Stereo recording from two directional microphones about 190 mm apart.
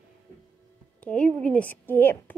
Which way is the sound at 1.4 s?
10° left (ahead or behind).